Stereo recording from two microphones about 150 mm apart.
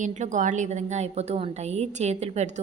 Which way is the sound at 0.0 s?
55° right (ahead or behind).